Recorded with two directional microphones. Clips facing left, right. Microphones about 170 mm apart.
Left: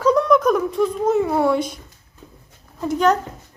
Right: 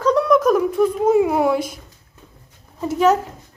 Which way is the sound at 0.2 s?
Centre (ahead or behind).